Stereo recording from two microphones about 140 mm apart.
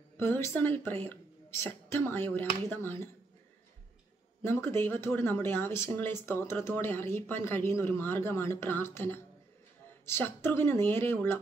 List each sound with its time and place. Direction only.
0.2 s speech: 15° left (ahead or behind)
4.4 s speech: 15° left (ahead or behind)